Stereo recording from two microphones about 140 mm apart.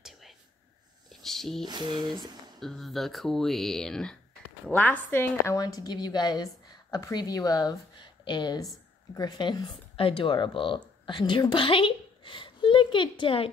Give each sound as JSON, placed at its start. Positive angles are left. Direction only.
{"t": 1.2, "sound": "a sound", "side_deg": 0}
{"t": 1.6, "sound": "speech", "side_deg": -30}
{"t": 2.6, "sound": "a woman's voice", "side_deg": 0}
{"t": 5.6, "sound": "a woman's voice", "side_deg": 25}